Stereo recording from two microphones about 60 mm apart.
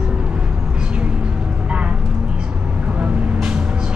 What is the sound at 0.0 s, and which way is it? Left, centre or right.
Vehicle, centre.